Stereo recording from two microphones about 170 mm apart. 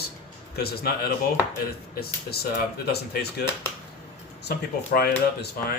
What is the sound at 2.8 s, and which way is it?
Speech, 70° left (ahead or behind).